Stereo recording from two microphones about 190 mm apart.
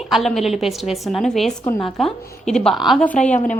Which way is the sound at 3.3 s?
40° left (ahead or behind).